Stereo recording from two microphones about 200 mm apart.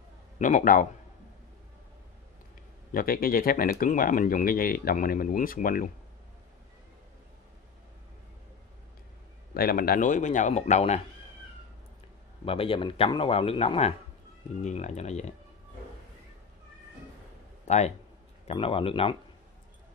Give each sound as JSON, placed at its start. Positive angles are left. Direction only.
{"t": 0.4, "sound": "speech", "side_deg": 40}
{"t": 2.9, "sound": "speech", "side_deg": 45}
{"t": 9.5, "sound": "speech", "side_deg": 50}
{"t": 12.4, "sound": "speech", "side_deg": 25}
{"t": 17.6, "sound": "speech", "side_deg": 35}